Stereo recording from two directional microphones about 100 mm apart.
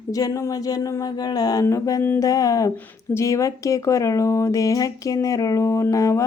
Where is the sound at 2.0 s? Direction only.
20° left (ahead or behind).